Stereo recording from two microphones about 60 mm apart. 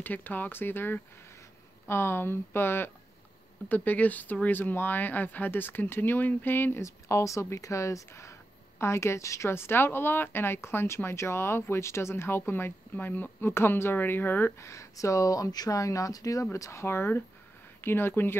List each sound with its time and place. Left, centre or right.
0.0 s speech: left
6.8 s speech: left
9.5 s speech: left
14.6 s speech: left
16.5 s speech: left
16.8 s speech: left